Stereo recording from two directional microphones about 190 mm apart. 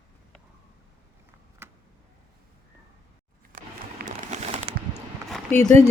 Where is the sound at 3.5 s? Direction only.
45° right (ahead or behind).